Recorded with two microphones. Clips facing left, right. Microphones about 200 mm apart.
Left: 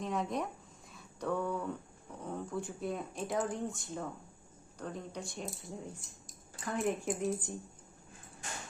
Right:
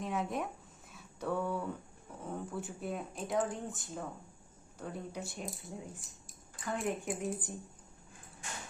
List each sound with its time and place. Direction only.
0.0 s speech: 5° right (ahead or behind)
0.9 s a sound: 5° right (ahead or behind)
2.2 s speech: 5° right (ahead or behind)